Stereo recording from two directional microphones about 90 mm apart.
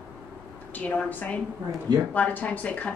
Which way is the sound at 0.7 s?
15° left (ahead or behind).